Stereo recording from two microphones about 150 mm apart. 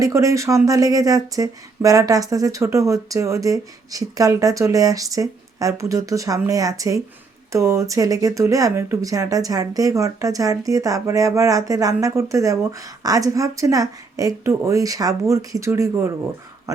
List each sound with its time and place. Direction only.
0.0 s speech: 20° right (ahead or behind)